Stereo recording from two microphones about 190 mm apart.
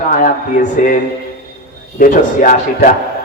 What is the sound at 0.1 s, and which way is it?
Speech, 40° left (ahead or behind).